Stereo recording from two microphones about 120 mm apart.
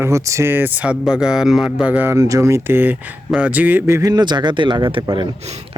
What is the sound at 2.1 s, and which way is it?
Speech, 25° right (ahead or behind).